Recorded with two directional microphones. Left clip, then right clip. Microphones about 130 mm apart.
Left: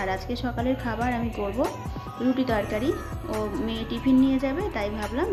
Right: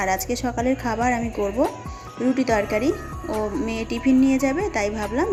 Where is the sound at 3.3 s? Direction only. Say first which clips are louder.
Right 4 dB; centre (ahead or behind).